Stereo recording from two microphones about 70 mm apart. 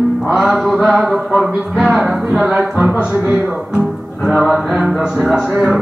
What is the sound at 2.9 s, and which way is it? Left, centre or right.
Speech, centre.